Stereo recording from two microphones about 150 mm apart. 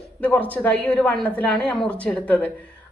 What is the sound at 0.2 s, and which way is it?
A woman's voice, 10° left (ahead or behind).